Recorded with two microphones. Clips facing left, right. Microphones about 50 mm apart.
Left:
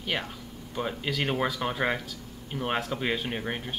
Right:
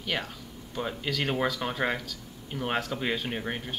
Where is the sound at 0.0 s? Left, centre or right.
Centre.